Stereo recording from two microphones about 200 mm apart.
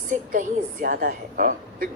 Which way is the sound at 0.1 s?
45° right (ahead or behind).